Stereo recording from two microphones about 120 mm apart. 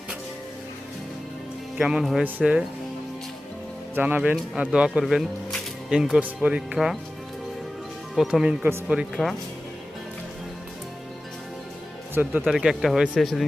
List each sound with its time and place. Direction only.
1.8 s speech: 5° right (ahead or behind)
3.9 s speech: 15° right (ahead or behind)
6.7 s speech: centre (ahead or behind)
8.1 s speech: 5° right (ahead or behind)
12.1 s speech: 10° right (ahead or behind)